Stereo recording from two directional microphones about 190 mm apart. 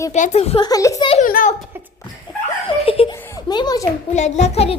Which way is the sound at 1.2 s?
45° left (ahead or behind).